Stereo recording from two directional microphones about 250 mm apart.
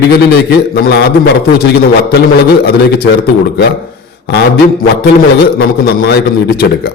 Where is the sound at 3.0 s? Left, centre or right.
Left.